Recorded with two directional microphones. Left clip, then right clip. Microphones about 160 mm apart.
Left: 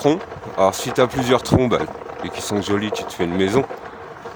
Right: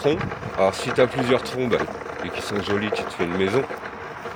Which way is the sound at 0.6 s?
30° left (ahead or behind).